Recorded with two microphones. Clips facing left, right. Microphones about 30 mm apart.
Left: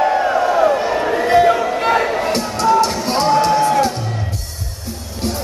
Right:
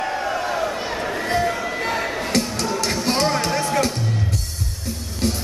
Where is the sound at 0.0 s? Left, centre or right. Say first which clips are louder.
Left 9 dB; left.